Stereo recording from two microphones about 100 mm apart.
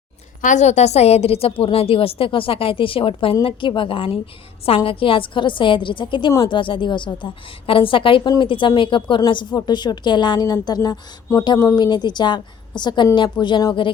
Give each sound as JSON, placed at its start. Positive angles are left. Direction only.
{"t": 0.8, "sound": "a woman's voice", "side_deg": 90}
{"t": 11.8, "sound": "a woman's voice", "side_deg": 45}